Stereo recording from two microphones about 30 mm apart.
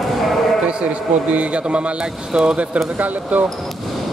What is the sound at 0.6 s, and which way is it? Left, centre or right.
A man's voice, right.